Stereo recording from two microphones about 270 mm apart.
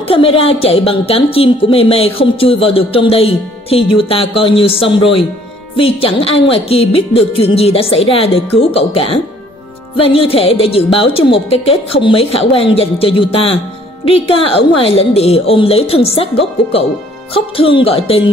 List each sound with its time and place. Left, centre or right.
0.1 s a woman's voice: centre